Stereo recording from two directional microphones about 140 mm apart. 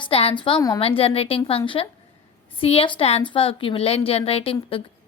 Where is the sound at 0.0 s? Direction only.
45° left (ahead or behind).